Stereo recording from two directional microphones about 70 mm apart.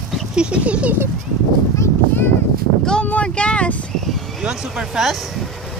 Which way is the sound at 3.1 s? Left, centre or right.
Centre.